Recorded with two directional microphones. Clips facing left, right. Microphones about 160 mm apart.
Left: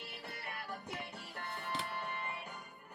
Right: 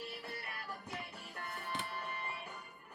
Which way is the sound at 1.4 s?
30° left (ahead or behind).